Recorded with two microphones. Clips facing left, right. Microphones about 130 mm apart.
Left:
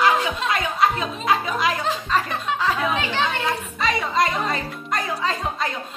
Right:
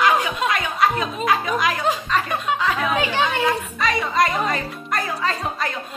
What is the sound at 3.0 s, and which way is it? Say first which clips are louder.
Chatter: right 3 dB; 10° right (ahead or behind).